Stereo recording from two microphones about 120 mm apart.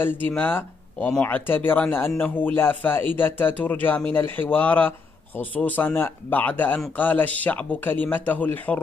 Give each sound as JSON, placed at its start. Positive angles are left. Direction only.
{"t": 0.0, "sound": "a man's voice", "side_deg": 15}